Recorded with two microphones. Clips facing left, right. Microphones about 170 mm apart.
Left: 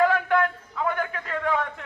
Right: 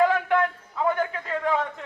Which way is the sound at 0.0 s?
20° right (ahead or behind).